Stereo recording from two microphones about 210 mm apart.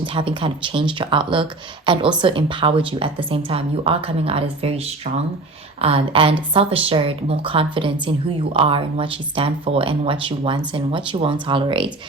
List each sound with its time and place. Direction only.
0.0 s speech: 25° right (ahead or behind)